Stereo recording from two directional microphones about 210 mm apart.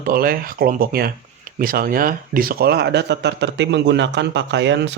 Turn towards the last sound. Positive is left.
turn(degrees=-55)  # may be behind; listen again after turning